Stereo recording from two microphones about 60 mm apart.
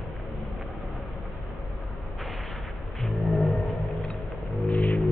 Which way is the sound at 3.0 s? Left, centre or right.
Centre.